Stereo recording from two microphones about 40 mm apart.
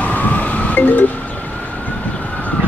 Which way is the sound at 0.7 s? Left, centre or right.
Left.